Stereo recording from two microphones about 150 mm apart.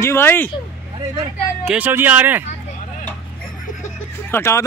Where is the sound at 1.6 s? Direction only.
10° right (ahead or behind).